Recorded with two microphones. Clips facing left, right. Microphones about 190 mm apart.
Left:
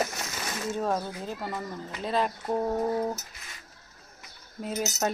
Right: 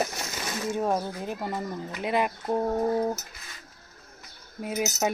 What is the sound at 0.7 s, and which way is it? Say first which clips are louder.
Speech: right 2 dB; 15° right (ahead or behind).